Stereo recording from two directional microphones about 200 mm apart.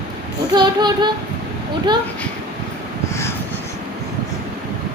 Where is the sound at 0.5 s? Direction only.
20° right (ahead or behind).